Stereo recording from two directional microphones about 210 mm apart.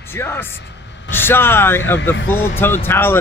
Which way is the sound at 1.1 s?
10° left (ahead or behind).